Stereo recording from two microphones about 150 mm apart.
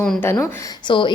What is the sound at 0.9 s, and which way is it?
Speech, 35° left (ahead or behind).